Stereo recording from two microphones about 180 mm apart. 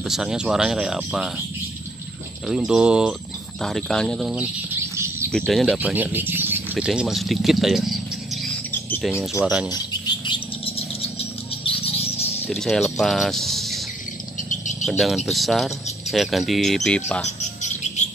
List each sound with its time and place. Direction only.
0.1 s speech: 5° right (ahead or behind)
2.4 s speech: 5° right (ahead or behind)
4.7 s bird: 15° right (ahead or behind)
5.3 s speech: centre (ahead or behind)
9.2 s speech: 5° right (ahead or behind)
10.0 s bird: 25° left (ahead or behind)
12.4 s speech: centre (ahead or behind)
14.9 s speech: centre (ahead or behind)
17.4 s bird: 40° left (ahead or behind)